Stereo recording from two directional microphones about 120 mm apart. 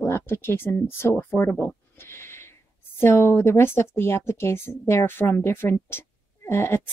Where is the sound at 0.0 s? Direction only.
20° left (ahead or behind).